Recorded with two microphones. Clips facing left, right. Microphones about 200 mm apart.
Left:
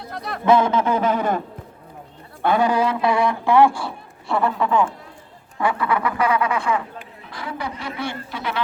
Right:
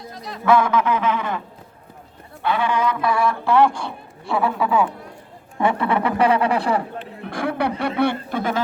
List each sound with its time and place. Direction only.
0.0 s a man's voice: 60° left (ahead or behind)
0.4 s speech: 20° left (ahead or behind); by 1.4 s 40° left (ahead or behind)
2.4 s a man's voice: 40° left (ahead or behind); by 4.9 s 5° right (ahead or behind)
5.5 s speech: 25° right (ahead or behind)
7.2 s a sound: 55° right (ahead or behind)
7.8 s speech: 60° right (ahead or behind)